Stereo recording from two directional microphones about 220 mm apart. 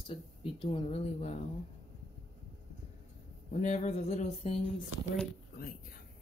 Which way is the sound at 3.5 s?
30° left (ahead or behind).